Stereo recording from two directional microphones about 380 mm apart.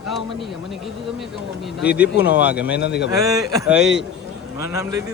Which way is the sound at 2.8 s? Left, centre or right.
Left.